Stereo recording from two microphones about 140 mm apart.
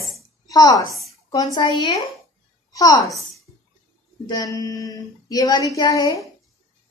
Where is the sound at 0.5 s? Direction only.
25° left (ahead or behind).